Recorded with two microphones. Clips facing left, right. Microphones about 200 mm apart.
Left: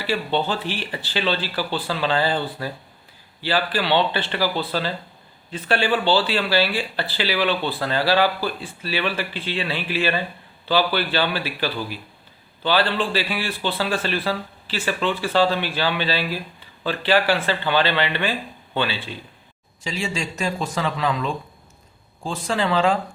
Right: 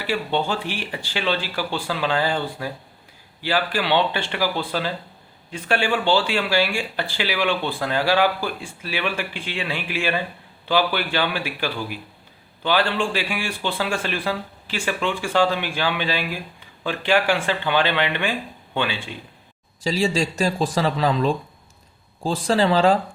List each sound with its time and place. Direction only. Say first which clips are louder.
0.0 s speech: even; 10° right (ahead or behind)
3.4 s speech: even; 10° right (ahead or behind)
19.8 s speech: right 6 dB; 35° right (ahead or behind)